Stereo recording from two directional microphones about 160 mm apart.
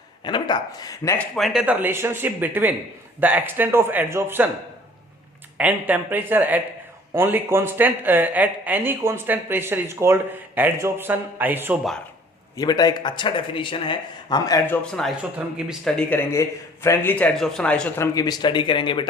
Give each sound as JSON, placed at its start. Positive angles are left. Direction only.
{"t": 0.3, "sound": "speech", "side_deg": 30}
{"t": 1.4, "sound": "speech", "side_deg": 0}
{"t": 5.5, "sound": "speech", "side_deg": -10}
{"t": 12.5, "sound": "speech", "side_deg": 25}
{"t": 14.7, "sound": "speech", "side_deg": 0}
{"t": 16.0, "sound": "a man's voice", "side_deg": 10}